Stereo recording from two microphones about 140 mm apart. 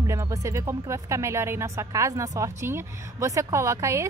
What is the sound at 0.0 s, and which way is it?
A woman's voice, 20° right (ahead or behind).